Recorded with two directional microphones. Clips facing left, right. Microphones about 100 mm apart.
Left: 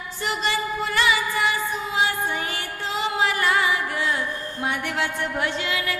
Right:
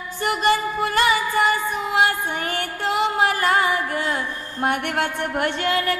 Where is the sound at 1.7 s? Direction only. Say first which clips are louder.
Right 4 dB; 60° right (ahead or behind).